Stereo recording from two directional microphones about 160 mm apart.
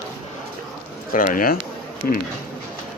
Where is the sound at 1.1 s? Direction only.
60° left (ahead or behind).